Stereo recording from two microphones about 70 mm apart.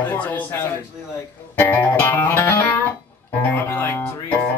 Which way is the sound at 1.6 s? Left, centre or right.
Left.